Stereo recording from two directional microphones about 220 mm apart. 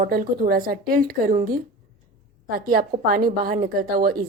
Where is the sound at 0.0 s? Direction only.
40° right (ahead or behind).